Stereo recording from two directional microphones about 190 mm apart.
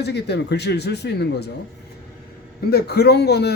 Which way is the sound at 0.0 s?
60° left (ahead or behind).